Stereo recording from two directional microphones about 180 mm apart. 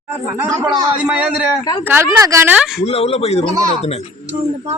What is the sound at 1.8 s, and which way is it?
Speech, 15° right (ahead or behind).